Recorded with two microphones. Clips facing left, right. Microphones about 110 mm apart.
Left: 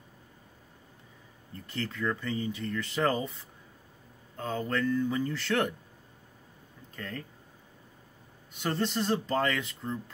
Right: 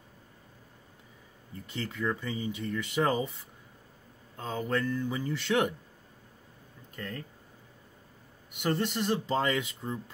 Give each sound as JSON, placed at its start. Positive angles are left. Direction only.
{"t": 1.7, "sound": "speech", "side_deg": -15}
{"t": 4.4, "sound": "speech", "side_deg": -15}
{"t": 7.0, "sound": "speech", "side_deg": -5}
{"t": 8.5, "sound": "speech", "side_deg": -10}